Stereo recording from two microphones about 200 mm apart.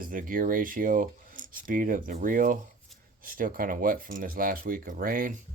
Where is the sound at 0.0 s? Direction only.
45° right (ahead or behind).